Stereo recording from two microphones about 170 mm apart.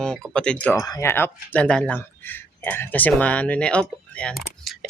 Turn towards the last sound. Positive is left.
turn(degrees=5)  # may be behind; listen again after turning